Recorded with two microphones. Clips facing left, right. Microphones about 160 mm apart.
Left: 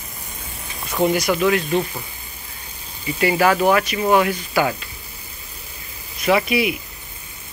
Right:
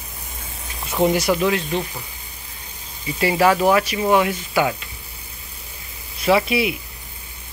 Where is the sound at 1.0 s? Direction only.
25° right (ahead or behind).